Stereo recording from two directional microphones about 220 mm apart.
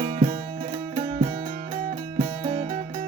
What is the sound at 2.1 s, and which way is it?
Music, 25° right (ahead or behind).